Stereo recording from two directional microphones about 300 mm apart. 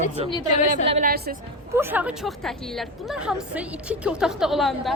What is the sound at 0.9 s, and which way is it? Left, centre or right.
Speech, right.